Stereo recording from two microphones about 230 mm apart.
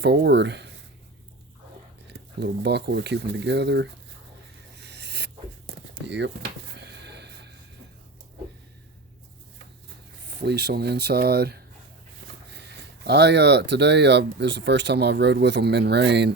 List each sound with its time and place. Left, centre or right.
0.0 s speech: right
2.0 s speech: right
4.8 s a sound: right
10.2 s speech: right